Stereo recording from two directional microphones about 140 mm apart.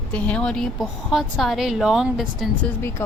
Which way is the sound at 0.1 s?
10° left (ahead or behind).